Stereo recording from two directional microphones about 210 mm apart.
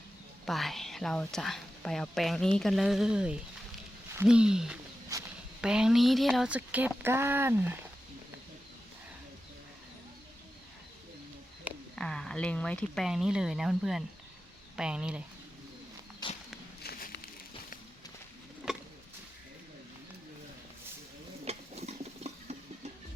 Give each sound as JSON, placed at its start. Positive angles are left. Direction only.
{"t": 0.4, "sound": "a woman's voice", "side_deg": 0}
{"t": 5.1, "sound": "walk", "side_deg": -15}
{"t": 5.6, "sound": "speech", "side_deg": -5}
{"t": 11.9, "sound": "a woman's voice", "side_deg": 5}
{"t": 16.2, "sound": "walk", "side_deg": 20}
{"t": 16.8, "sound": "a sound", "side_deg": 50}
{"t": 18.6, "sound": "a sound", "side_deg": 0}
{"t": 21.4, "sound": "stir", "side_deg": -30}